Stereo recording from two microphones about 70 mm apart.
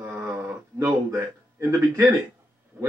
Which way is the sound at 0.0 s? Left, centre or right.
Right.